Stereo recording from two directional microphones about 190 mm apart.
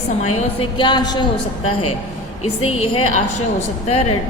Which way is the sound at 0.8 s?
20° left (ahead or behind).